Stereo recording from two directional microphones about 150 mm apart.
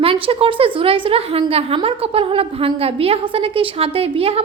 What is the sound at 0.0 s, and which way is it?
A woman's voice, 40° right (ahead or behind).